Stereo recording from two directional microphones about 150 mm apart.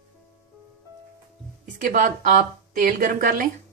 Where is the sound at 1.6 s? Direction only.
60° right (ahead or behind).